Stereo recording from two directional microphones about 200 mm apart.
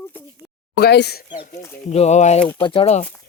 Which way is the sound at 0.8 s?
55° left (ahead or behind).